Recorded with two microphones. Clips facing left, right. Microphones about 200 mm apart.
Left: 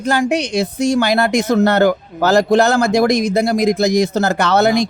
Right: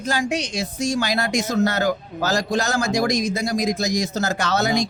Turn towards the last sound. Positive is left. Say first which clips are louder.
# left 7 dB
turn(degrees=60)  # may be behind; listen again after turning